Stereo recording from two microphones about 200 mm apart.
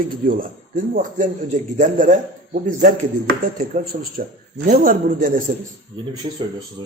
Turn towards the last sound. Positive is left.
turn(degrees=-25)  # may be behind; listen again after turning